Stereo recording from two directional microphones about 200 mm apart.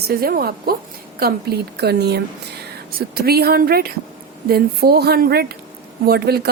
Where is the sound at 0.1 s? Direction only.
50° right (ahead or behind).